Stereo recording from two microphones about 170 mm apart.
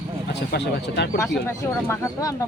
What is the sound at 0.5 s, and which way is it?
Speech, 80° left.